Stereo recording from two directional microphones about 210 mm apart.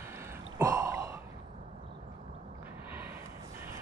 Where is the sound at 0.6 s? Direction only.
15° right (ahead or behind).